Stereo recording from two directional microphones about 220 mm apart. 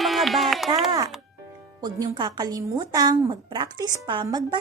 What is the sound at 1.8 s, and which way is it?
A woman's voice, 15° right (ahead or behind).